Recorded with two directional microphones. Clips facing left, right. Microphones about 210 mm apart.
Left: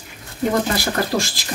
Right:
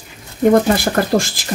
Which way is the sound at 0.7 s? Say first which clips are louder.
Right 5 dB; 50° right (ahead or behind).